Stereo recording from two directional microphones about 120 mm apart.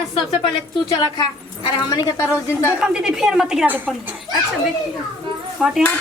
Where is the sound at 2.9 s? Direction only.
5° right (ahead or behind).